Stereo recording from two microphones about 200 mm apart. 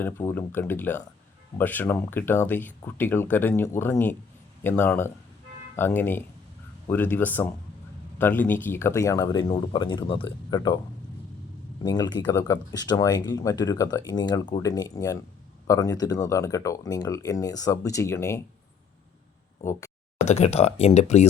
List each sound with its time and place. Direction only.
0.0 s speech: 10° left (ahead or behind)
11.8 s speech: 20° left (ahead or behind)
20.2 s speech: 35° left (ahead or behind)